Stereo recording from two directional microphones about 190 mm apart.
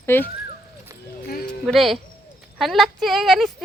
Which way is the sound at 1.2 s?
50° left (ahead or behind).